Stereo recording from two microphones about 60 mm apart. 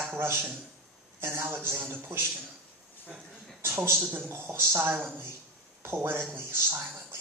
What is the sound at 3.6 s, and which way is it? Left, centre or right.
A man's voice, right.